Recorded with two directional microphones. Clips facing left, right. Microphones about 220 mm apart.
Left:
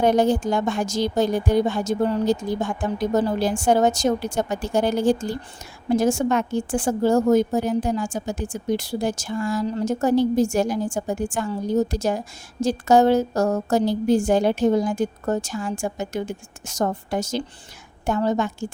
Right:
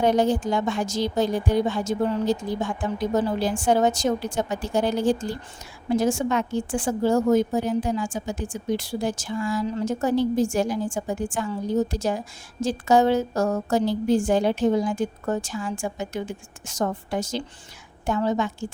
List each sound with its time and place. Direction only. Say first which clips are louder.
0.0 s a woman's voice: left 2 dB; 45° left (ahead or behind)